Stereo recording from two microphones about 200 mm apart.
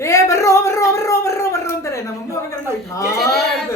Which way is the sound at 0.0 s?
15° left (ahead or behind).